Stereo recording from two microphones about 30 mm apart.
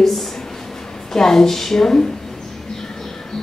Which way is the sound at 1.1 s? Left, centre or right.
Centre.